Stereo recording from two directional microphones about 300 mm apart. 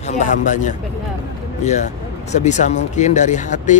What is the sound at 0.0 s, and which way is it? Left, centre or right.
A man's voice, left.